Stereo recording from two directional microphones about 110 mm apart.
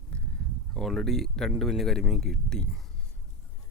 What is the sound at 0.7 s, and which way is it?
Speech, 5° left (ahead or behind).